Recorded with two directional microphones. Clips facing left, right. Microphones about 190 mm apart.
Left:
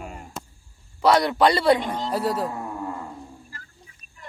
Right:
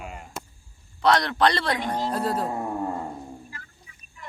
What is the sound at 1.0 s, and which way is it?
A woman's voice, 10° left (ahead or behind).